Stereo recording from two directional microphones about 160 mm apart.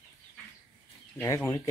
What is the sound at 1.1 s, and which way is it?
Speech, 20° left (ahead or behind).